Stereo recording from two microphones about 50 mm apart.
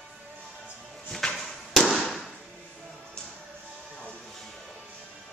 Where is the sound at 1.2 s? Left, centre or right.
Centre.